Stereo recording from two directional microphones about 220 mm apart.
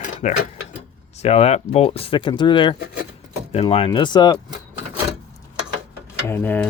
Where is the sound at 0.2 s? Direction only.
35° left (ahead or behind).